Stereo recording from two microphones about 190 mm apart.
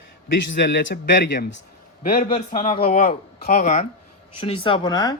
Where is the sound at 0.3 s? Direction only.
70° left (ahead or behind).